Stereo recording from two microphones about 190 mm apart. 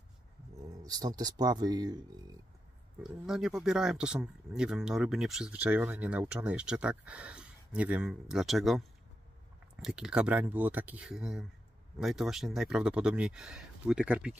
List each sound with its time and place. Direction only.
0.7 s speech: 20° right (ahead or behind)
3.0 s speech: 5° right (ahead or behind)